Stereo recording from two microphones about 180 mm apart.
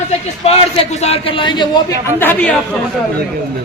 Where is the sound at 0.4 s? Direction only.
35° left (ahead or behind).